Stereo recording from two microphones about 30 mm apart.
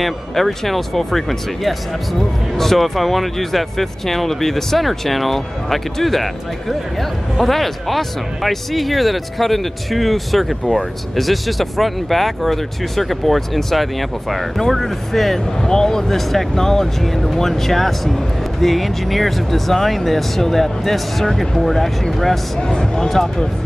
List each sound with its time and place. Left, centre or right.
0.0 s speech: centre
22.6 s speech: left